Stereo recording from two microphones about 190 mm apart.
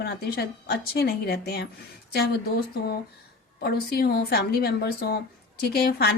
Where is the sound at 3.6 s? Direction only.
55° left (ahead or behind).